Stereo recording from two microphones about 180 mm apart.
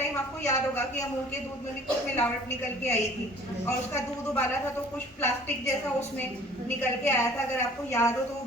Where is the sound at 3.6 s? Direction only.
10° left (ahead or behind).